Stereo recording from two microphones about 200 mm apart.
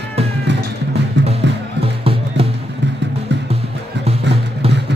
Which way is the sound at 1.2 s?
65° right (ahead or behind).